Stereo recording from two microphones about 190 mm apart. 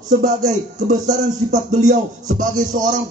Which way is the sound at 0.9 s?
40° right (ahead or behind).